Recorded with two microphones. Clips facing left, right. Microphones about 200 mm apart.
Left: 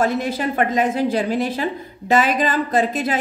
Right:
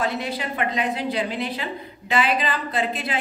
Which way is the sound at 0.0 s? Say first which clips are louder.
Left 6 dB; 45° left (ahead or behind).